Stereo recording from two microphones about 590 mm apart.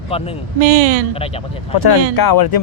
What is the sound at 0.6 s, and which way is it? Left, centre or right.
Speech, right.